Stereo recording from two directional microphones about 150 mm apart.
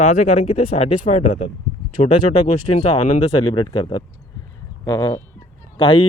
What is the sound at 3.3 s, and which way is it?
Speech, 30° left (ahead or behind).